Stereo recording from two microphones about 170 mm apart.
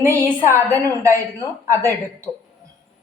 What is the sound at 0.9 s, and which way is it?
Speech, 15° right (ahead or behind).